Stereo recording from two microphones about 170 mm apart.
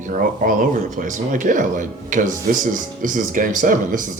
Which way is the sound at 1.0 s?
50° right (ahead or behind).